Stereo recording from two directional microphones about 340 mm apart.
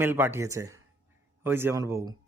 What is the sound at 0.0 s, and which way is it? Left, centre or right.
Speech, centre.